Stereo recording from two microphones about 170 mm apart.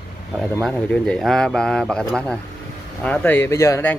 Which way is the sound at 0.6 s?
Centre (ahead or behind).